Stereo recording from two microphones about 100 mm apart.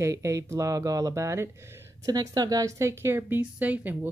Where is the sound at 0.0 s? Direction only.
30° right (ahead or behind).